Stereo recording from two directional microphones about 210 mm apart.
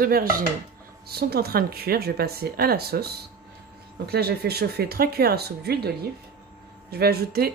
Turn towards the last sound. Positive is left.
turn(degrees=-45)  # may be behind; listen again after turning